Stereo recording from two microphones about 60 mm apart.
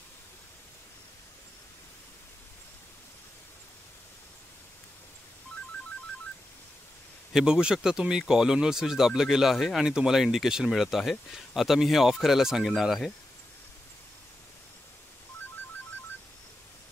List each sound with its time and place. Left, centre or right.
7.3 s speech: centre